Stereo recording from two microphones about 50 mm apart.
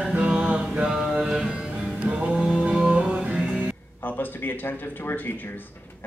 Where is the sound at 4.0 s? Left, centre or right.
Left.